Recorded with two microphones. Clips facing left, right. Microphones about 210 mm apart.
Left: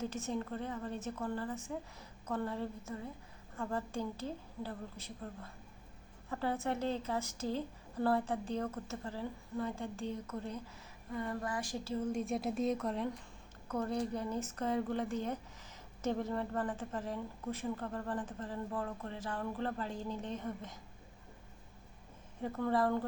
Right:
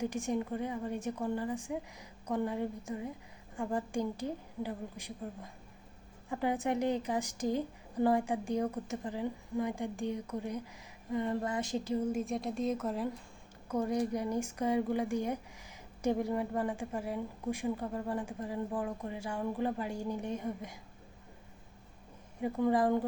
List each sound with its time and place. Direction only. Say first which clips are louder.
0.0 s a woman's voice: right 4 dB; 15° right (ahead or behind)
12.0 s a woman's voice: right 2 dB; centre (ahead or behind)
22.4 s a woman's voice: right 4 dB; 15° right (ahead or behind)